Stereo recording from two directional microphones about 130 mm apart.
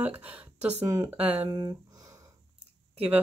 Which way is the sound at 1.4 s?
30° right (ahead or behind).